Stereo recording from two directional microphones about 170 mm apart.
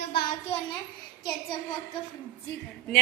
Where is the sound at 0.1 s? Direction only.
65° left (ahead or behind).